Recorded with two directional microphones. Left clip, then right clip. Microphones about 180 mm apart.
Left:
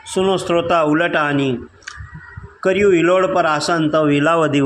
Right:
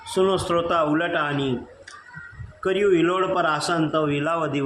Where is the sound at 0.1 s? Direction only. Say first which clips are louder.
Left 4 dB; 25° left (ahead or behind).